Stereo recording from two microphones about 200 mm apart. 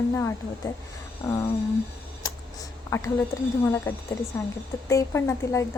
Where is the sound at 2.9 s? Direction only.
15° left (ahead or behind).